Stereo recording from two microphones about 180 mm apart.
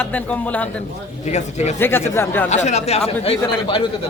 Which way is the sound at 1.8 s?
10° left (ahead or behind).